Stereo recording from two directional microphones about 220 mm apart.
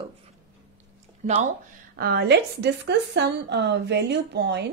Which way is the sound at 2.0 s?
45° right (ahead or behind).